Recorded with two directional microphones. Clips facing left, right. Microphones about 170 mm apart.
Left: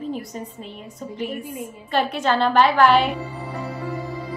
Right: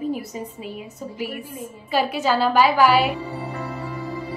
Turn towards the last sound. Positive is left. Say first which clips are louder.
# left 1 dB
turn(degrees=-5)  # may be behind; listen again after turning